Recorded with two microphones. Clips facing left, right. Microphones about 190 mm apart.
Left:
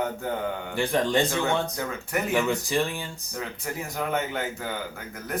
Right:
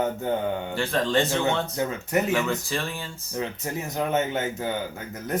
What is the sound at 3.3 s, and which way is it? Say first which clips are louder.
A man's voice: right 4 dB; 20° right (ahead or behind).